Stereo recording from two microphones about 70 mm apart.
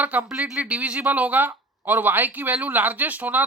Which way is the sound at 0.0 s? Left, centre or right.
Right.